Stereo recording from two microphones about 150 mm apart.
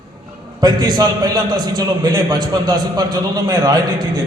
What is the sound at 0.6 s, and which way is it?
A man's voice, 25° right (ahead or behind).